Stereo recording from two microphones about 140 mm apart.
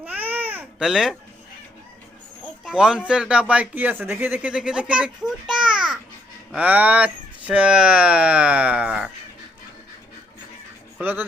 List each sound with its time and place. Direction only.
0.0 s babbling: 10° right (ahead or behind)
0.9 s speech: 5° right (ahead or behind)
2.6 s a child's voice: 5° right (ahead or behind)
10.9 s speech: 15° right (ahead or behind)